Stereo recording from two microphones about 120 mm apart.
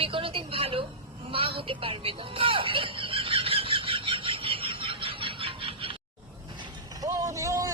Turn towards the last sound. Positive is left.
turn(degrees=-25)  # may be behind; listen again after turning